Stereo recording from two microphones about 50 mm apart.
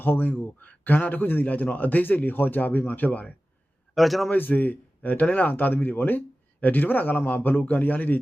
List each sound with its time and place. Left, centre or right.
0.0 s a man's voice: left
3.9 s a man's voice: centre
4.3 s a man's voice: left